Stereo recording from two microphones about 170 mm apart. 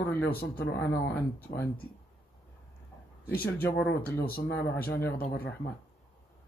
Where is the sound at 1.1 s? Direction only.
10° left (ahead or behind).